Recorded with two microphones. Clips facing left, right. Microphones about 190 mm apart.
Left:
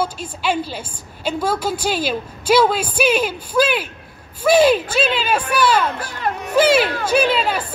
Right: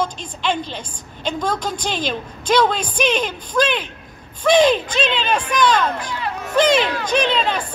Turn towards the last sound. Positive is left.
turn(degrees=5)  # may be behind; listen again after turning